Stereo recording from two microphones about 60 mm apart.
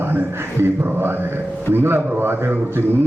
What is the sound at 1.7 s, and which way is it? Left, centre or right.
Speech, right.